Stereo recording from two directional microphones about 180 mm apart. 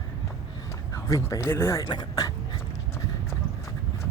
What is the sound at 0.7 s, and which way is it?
Speech, 15° left (ahead or behind).